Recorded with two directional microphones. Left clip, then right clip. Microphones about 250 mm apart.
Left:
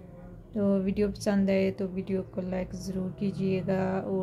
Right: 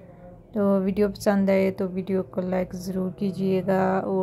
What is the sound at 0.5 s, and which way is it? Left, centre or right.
A woman's voice, centre.